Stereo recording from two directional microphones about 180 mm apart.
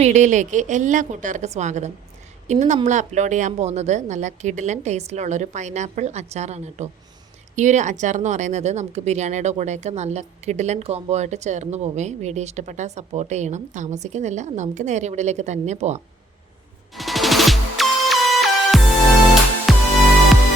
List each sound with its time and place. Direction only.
0.0 s a woman's voice: 40° right (ahead or behind)
16.9 s music: centre (ahead or behind)